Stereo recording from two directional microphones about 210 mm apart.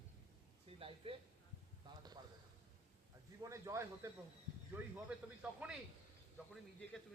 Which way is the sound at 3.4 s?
15° right (ahead or behind).